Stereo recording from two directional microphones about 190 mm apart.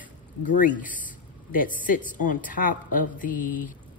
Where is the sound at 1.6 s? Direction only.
45° left (ahead or behind).